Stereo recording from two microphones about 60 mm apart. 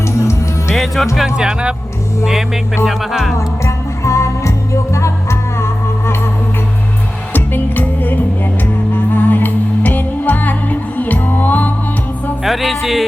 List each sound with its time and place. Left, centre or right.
0.2 s music: left
0.7 s music: centre
1.4 s speech: centre
2.8 s music: centre
3.3 s music: left
7.3 s music: left
12.4 s music: centre